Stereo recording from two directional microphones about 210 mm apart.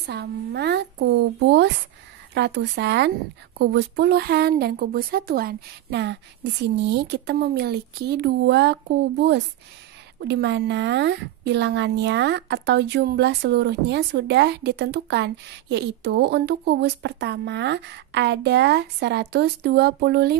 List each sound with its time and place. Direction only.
0.0 s a woman's voice: 50° right (ahead or behind)